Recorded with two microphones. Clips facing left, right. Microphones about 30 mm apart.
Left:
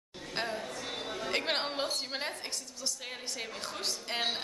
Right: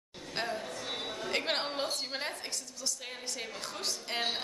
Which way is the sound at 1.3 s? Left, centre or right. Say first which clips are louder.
Even; centre.